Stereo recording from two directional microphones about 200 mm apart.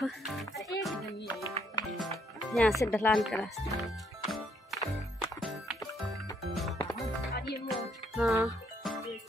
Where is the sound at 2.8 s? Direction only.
10° left (ahead or behind).